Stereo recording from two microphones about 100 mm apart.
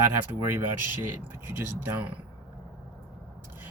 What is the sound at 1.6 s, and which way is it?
Speech, 25° right (ahead or behind).